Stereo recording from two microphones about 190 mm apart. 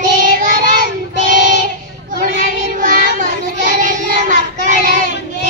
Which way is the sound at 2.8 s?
45° right (ahead or behind).